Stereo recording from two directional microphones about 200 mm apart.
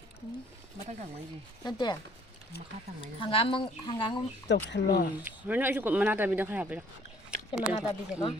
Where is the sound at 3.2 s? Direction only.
25° left (ahead or behind).